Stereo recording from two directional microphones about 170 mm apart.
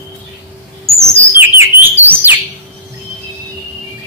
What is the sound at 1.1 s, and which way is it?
Bird, 15° right (ahead or behind).